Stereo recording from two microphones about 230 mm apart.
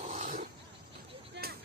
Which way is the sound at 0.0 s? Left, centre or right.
Right.